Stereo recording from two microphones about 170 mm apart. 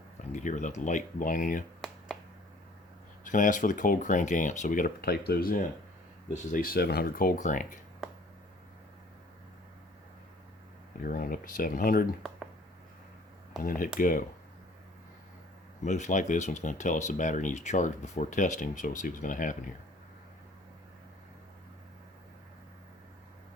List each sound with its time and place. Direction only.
0.3 s speech: 45° left (ahead or behind)
3.2 s speech: 50° left (ahead or behind); by 7.3 s 65° left (ahead or behind)
7.3 s speech: 50° left (ahead or behind)
11.0 s speech: 55° left (ahead or behind)
13.6 s speech: 55° left (ahead or behind)
15.8 s speech: 45° left (ahead or behind)